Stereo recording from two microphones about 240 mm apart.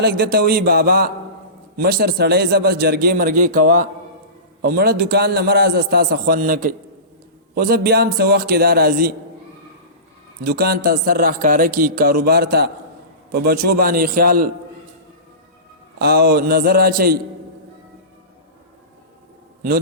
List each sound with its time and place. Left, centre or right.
0.0 s speech: right
10.4 s speech: right
16.0 s speech: right